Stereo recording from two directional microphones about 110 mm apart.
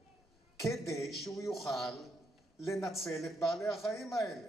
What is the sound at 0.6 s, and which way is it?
A man's voice, centre (ahead or behind).